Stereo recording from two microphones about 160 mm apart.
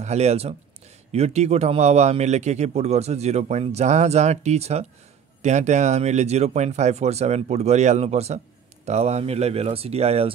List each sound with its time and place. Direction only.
0.0 s a man's voice: 45° right (ahead or behind)